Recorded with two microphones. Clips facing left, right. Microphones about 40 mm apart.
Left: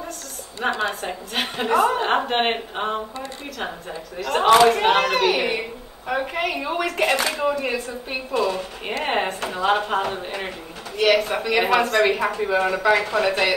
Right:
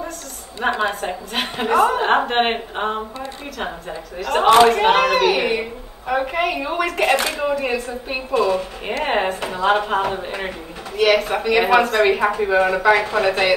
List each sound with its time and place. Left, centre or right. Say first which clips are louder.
0.6 s a woman's voice: right 3 dB; centre